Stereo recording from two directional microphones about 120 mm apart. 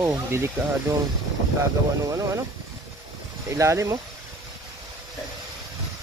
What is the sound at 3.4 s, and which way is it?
Speech, 25° right (ahead or behind).